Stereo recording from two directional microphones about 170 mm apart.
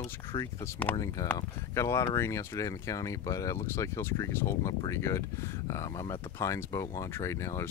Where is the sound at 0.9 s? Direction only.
20° left (ahead or behind).